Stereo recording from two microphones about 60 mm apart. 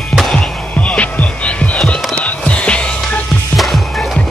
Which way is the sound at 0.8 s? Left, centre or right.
Left.